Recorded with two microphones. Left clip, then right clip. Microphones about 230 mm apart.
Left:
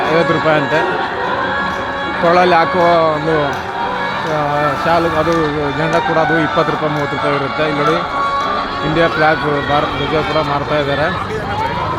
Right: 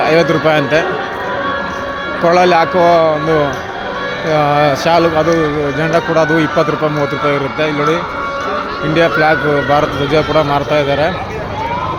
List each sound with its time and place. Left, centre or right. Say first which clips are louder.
0.1 s speech: even; centre
2.2 s speech: right 1 dB; centre
4.5 s speech: right 1 dB; centre
9.0 s speech: right 2 dB; centre